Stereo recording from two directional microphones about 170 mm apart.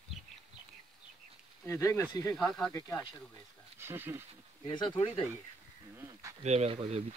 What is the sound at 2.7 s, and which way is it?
Speech, 20° left (ahead or behind).